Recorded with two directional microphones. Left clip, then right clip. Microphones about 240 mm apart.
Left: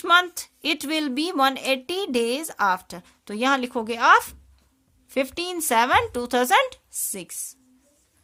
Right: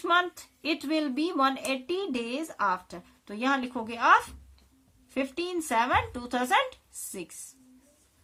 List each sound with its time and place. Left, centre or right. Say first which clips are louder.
0.0 s a woman's voice: left 7 dB; left